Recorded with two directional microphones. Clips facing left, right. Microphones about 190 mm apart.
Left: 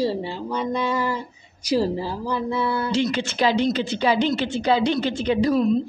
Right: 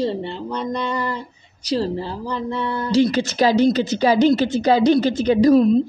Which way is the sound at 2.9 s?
35° right (ahead or behind).